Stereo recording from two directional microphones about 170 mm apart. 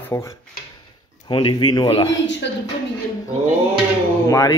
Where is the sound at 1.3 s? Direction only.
30° left (ahead or behind).